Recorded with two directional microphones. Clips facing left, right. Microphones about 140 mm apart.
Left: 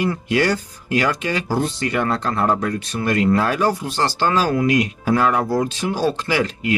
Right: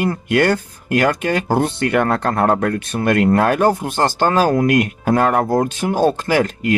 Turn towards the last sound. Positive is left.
turn(degrees=-50)  # may be behind; listen again after turning